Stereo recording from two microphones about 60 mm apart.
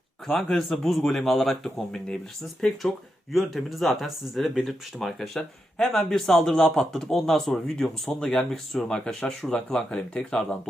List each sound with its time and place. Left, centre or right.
0.3 s speech: centre